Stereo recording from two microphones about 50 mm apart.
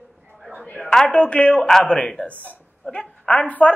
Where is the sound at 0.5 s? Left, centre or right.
Left.